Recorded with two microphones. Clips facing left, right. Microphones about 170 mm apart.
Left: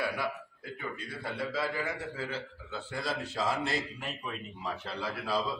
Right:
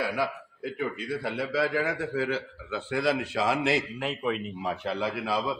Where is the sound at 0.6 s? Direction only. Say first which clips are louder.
Right 8 dB; 90° right.